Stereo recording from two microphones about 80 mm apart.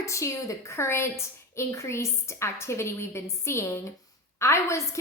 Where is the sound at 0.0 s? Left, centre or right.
Left.